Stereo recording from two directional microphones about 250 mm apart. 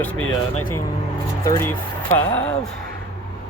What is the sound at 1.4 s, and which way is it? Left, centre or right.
Speech, centre.